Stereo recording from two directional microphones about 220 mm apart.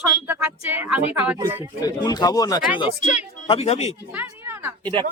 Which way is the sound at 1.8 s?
15° left (ahead or behind).